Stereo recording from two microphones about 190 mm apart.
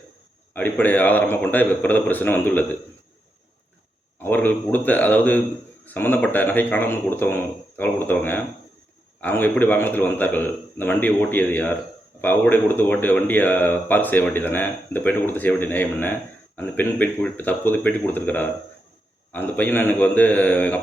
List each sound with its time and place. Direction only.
0.5 s speech: 10° left (ahead or behind)
4.2 s speech: 10° left (ahead or behind)